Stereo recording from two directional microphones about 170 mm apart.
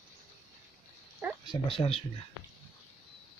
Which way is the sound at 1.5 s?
30° left (ahead or behind).